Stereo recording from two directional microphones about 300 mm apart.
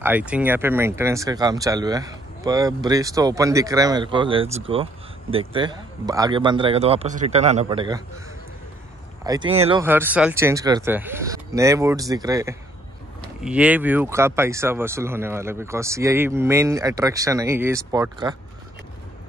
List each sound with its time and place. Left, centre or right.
0.0 s speech: centre
9.2 s speech: centre
9.8 s speech: centre